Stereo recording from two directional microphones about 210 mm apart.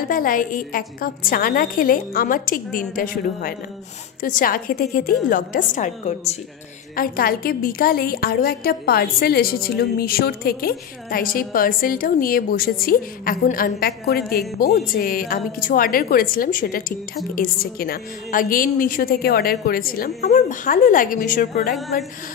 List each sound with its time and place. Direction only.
0.0 s a woman's voice: 40° left (ahead or behind)
4.2 s a woman's voice: 40° left (ahead or behind)